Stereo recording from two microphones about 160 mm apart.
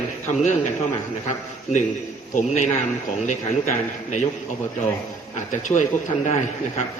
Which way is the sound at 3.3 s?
45° left (ahead or behind).